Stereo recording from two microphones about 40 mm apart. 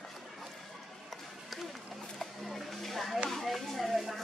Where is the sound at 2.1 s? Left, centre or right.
Centre.